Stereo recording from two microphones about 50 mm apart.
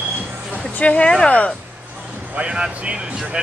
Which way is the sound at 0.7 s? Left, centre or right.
Left.